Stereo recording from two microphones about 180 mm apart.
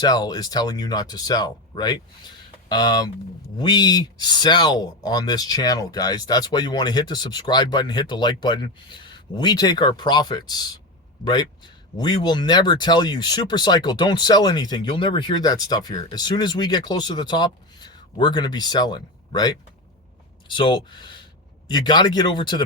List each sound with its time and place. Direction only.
0.0 s speech: 20° left (ahead or behind)